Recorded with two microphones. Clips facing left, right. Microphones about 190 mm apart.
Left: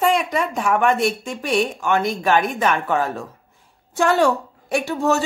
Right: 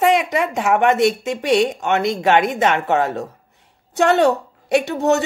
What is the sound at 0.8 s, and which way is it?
Speech, 75° right (ahead or behind).